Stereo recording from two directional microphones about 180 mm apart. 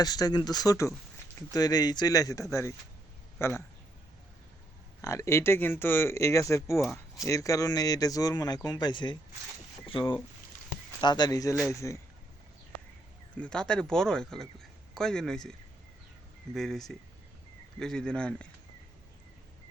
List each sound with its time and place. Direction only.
0.0 s speech: 20° left (ahead or behind)
5.0 s speech: 15° left (ahead or behind)
13.3 s a man's voice: 5° left (ahead or behind)
16.6 s a man's voice: centre (ahead or behind)